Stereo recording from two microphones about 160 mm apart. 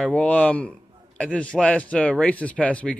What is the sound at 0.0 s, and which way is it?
A man's voice, 10° left (ahead or behind).